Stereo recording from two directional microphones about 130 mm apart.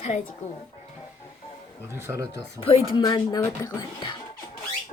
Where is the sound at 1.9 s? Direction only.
20° right (ahead or behind).